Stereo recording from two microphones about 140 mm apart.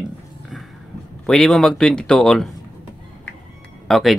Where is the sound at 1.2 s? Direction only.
Centre (ahead or behind).